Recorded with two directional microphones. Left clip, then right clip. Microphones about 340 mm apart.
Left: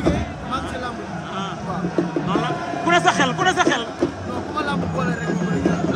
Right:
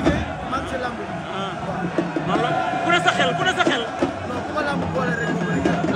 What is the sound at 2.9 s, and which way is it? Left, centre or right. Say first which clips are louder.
Speech: left 3 dB; centre.